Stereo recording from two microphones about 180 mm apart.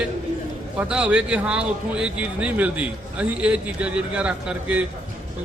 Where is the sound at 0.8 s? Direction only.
5° right (ahead or behind).